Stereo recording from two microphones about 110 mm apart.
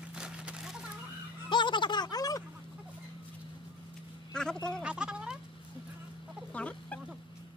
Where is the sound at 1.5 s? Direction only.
45° left (ahead or behind).